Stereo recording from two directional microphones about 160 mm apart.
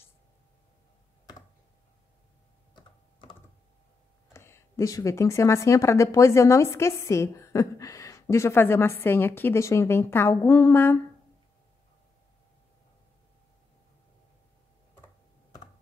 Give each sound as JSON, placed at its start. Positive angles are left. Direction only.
{"t": 2.7, "sound": "typing", "side_deg": 30}
{"t": 4.3, "sound": "speech", "side_deg": 15}